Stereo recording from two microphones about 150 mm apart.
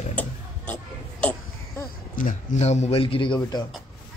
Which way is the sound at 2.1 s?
55° left (ahead or behind).